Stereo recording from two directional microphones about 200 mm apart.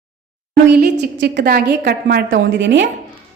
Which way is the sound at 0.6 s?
60° right (ahead or behind).